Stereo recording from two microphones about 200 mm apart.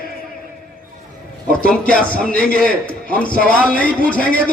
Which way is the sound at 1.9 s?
45° left (ahead or behind).